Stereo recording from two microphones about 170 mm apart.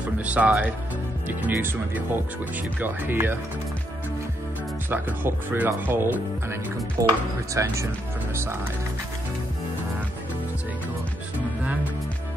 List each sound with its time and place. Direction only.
0.0 s speech: 10° right (ahead or behind)
4.8 s speech: 10° right (ahead or behind)